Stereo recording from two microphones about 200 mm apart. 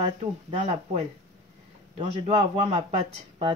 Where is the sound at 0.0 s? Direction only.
30° right (ahead or behind).